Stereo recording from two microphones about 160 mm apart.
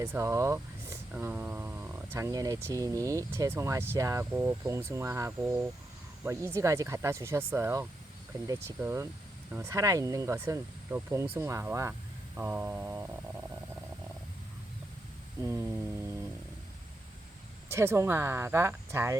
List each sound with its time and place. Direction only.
0.0 s speech: 15° right (ahead or behind)
15.4 s a sound: 20° right (ahead or behind)
17.7 s speech: 15° right (ahead or behind)